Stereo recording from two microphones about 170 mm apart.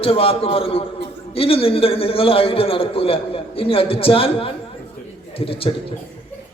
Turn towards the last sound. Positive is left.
turn(degrees=35)  # may be behind; listen again after turning